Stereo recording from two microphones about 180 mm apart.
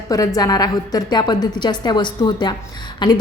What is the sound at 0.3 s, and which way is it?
A woman's voice, 20° left (ahead or behind).